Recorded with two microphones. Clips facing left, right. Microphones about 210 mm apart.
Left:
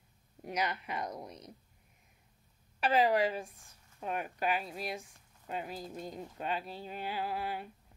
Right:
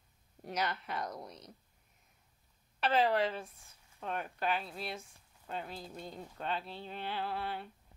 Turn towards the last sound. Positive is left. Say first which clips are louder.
# left 2 dB
turn(degrees=10)  # may be behind; listen again after turning